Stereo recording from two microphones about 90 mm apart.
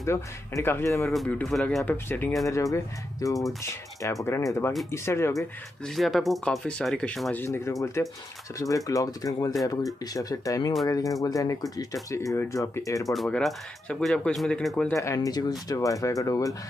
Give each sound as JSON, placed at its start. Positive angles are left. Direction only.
{"t": 0.0, "sound": "speech", "side_deg": 30}
{"t": 1.1, "sound": "speech", "side_deg": 5}
{"t": 1.9, "sound": "speech", "side_deg": 20}
{"t": 2.4, "sound": "speech", "side_deg": 35}
{"t": 5.9, "sound": "speech", "side_deg": 0}
{"t": 7.3, "sound": "speech", "side_deg": 25}
{"t": 13.0, "sound": "speech", "side_deg": 0}
{"t": 15.0, "sound": "speech", "side_deg": 35}